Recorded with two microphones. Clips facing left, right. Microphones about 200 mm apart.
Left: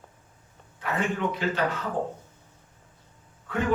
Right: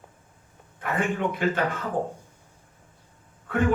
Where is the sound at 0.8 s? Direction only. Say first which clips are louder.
Right 1 dB; 50° right (ahead or behind).